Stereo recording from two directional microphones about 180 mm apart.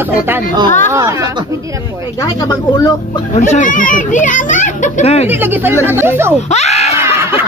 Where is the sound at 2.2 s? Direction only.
20° left (ahead or behind).